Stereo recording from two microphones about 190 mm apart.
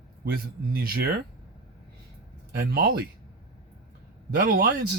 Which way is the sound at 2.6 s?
55° right (ahead or behind).